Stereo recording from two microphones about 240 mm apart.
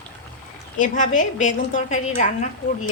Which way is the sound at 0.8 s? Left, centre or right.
Left.